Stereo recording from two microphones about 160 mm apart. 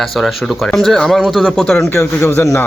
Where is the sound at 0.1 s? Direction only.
Centre (ahead or behind).